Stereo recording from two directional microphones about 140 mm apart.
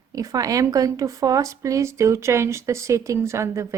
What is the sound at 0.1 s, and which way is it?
A woman's voice, 25° right (ahead or behind).